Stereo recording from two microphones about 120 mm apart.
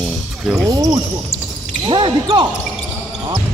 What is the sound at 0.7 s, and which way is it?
Speech, 30° right (ahead or behind).